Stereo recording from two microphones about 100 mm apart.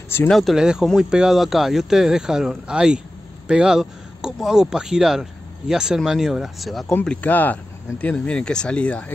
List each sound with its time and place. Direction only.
0.3 s speech: centre (ahead or behind)
7.1 s speech: 15° left (ahead or behind)